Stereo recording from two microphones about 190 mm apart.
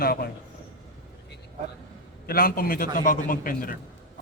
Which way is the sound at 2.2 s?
50° left (ahead or behind).